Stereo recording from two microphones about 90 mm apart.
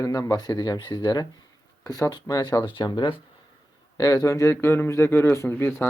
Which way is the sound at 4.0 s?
40° left (ahead or behind).